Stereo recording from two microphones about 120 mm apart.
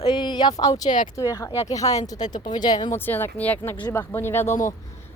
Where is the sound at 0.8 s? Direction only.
90° left.